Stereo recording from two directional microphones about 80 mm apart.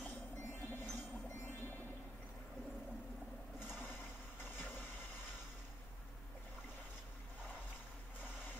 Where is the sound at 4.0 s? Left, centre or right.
Left.